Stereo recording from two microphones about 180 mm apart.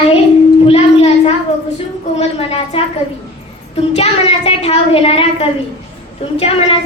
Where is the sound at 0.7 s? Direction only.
35° left (ahead or behind).